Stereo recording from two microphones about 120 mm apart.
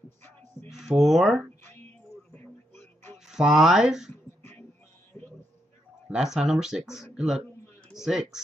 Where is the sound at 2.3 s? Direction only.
15° left (ahead or behind).